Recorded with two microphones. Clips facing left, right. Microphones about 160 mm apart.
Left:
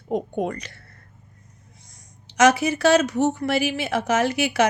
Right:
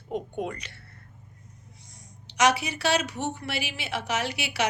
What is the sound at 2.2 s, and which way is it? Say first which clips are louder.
A woman's voice: left 6 dB; 45° left (ahead or behind).